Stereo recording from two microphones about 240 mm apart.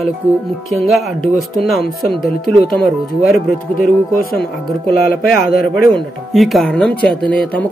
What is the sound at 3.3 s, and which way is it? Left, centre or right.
Speech, left.